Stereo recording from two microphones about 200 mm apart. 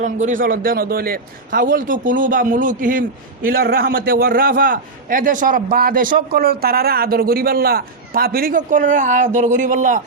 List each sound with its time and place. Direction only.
0.0 s a man's voice: 40° right (ahead or behind)